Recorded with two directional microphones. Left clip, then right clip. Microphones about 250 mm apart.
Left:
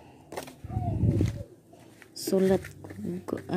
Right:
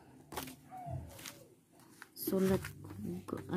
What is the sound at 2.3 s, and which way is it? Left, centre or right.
Speech, centre.